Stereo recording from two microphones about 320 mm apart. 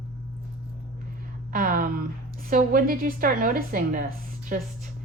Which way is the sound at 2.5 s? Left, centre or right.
Right.